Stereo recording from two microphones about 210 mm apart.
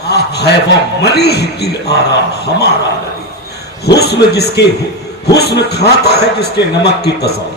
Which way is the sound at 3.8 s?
50° left (ahead or behind).